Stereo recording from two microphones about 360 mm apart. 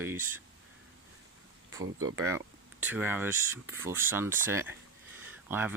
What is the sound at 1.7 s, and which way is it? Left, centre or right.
Speech, right.